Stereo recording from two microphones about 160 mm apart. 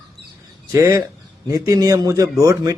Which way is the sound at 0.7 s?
20° right (ahead or behind).